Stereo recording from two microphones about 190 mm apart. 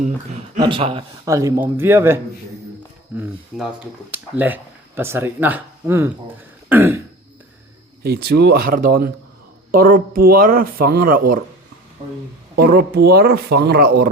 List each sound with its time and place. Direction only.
0.0 s speech: 40° right (ahead or behind)
0.6 s speech: 25° right (ahead or behind)
1.3 s speech: 15° right (ahead or behind)
3.2 s speech: 10° right (ahead or behind)
8.0 s speech: 60° right (ahead or behind)
12.5 s speech: 55° right (ahead or behind)